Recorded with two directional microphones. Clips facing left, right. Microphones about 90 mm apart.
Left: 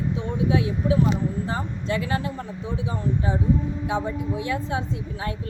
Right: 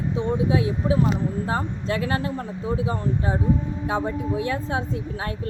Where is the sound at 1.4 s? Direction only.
50° right (ahead or behind).